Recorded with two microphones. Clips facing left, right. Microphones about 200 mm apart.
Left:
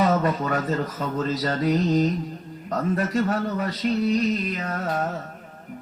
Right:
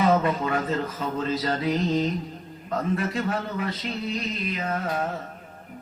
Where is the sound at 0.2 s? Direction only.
40° left (ahead or behind).